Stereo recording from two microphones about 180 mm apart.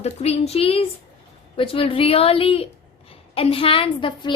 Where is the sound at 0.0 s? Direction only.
35° left (ahead or behind).